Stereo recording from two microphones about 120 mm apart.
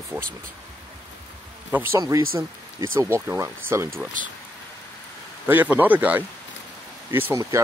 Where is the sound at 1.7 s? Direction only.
15° right (ahead or behind).